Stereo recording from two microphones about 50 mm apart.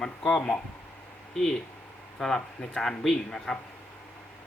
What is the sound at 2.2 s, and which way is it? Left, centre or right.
Speech, centre.